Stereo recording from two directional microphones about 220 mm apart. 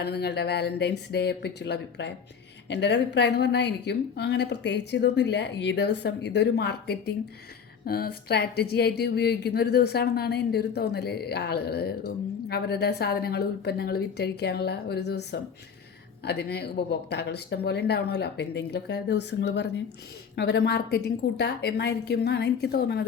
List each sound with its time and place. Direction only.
0.0 s speech: 50° left (ahead or behind)